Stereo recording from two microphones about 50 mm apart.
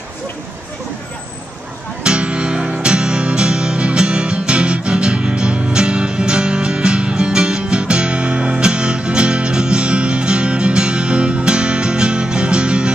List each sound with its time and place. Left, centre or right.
2.0 s music: right